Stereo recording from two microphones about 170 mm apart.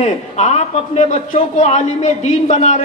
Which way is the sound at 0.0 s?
40° left (ahead or behind).